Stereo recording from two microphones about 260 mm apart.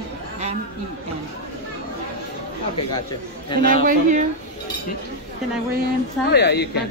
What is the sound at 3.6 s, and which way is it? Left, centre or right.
Speech, right.